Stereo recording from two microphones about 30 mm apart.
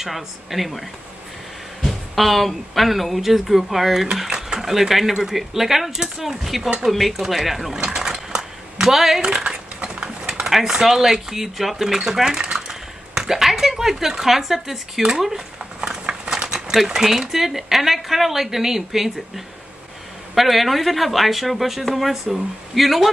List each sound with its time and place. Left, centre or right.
0.0 s speech: centre
1.9 s speech: centre
7.7 s a sound: centre
9.2 s a sound: right
10.5 s speech: centre
12.4 s typing: right
13.3 s speech: centre
16.1 s a sound: right
16.5 s speech: centre
22.1 s speech: centre
22.8 s speech: centre